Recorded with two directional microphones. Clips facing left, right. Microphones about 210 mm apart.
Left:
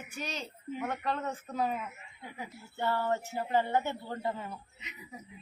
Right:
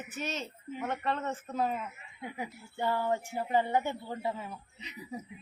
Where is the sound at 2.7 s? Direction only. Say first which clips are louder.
Right 1 dB; 15° right (ahead or behind).